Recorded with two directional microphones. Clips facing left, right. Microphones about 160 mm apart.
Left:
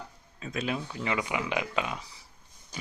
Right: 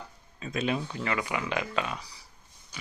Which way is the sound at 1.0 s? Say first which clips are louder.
Left 3 dB; 15° left (ahead or behind).